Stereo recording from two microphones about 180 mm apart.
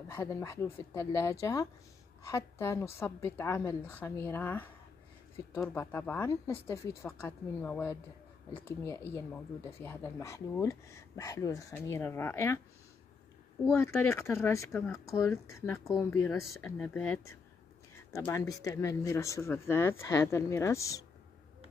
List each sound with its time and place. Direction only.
0.1 s speech: 15° left (ahead or behind)
5.8 s speech: 10° left (ahead or behind)
13.7 s speech: 15° left (ahead or behind)
16.7 s speech: 5° left (ahead or behind)
18.1 s speech: 15° left (ahead or behind)